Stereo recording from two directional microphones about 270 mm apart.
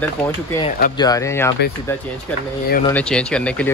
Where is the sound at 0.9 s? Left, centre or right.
Centre.